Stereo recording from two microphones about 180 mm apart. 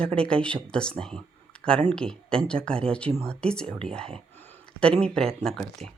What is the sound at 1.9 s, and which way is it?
Speech, 5° left (ahead or behind).